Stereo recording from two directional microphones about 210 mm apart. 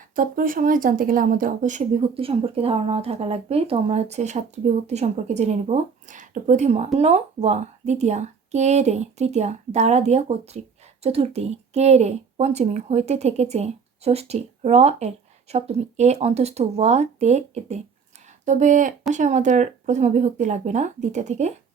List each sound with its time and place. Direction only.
0.2 s speech: 40° right (ahead or behind)